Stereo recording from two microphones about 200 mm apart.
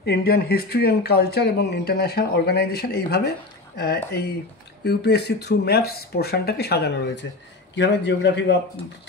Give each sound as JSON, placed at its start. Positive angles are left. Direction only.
{"t": 0.0, "sound": "a man's voice", "side_deg": 55}